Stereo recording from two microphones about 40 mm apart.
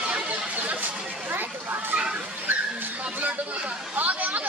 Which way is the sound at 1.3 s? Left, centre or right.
Right.